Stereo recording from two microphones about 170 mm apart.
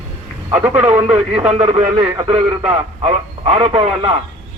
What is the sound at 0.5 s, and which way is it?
Speech, 10° right (ahead or behind).